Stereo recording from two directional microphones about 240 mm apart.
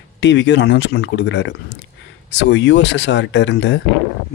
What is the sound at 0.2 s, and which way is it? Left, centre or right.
Speech, left.